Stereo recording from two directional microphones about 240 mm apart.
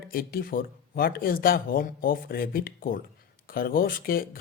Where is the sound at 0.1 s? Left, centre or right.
Left.